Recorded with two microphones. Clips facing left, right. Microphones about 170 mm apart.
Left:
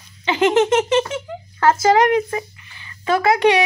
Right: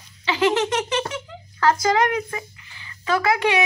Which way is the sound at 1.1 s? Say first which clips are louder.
Left 6 dB; 25° left (ahead or behind).